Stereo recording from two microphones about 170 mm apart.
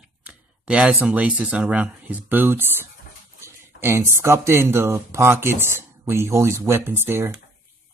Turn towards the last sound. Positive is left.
turn(degrees=-15)  # may be behind; listen again after turning